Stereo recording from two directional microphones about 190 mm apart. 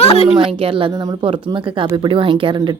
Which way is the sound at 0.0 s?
35° left (ahead or behind).